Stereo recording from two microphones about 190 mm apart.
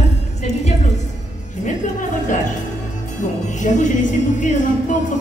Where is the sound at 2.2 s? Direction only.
40° left (ahead or behind).